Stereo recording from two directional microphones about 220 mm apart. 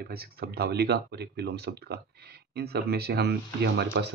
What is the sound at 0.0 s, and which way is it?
Speech, 45° right (ahead or behind).